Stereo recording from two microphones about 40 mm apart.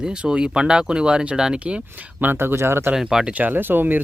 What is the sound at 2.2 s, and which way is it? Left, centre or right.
Speech, right.